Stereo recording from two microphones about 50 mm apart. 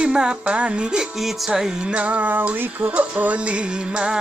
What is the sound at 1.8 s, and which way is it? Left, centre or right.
Music, right.